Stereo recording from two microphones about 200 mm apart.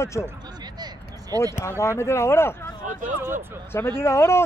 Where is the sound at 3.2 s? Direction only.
10° right (ahead or behind).